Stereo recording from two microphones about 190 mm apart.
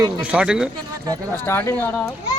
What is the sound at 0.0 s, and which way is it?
Speech, 5° right (ahead or behind).